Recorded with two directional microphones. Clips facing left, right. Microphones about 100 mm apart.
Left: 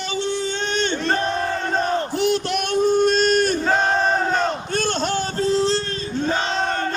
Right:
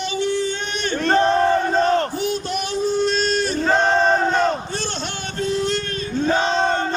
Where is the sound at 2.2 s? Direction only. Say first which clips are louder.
Left 3 dB; 75° left (ahead or behind); by 3.6 s 50° left (ahead or behind).